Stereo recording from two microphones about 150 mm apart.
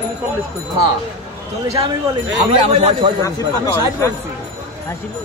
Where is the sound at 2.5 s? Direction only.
40° right (ahead or behind).